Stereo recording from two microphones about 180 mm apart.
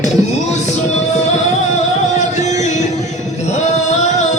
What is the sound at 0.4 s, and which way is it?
Music, 40° left (ahead or behind).